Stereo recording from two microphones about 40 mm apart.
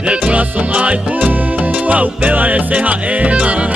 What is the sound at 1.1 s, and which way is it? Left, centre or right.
Music, right.